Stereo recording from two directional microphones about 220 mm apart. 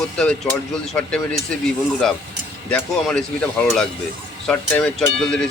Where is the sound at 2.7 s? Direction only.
5° left (ahead or behind).